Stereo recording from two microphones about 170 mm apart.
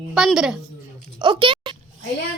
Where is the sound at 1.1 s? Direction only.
25° right (ahead or behind).